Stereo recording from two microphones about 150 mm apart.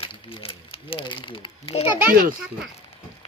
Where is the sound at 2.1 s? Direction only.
70° right (ahead or behind).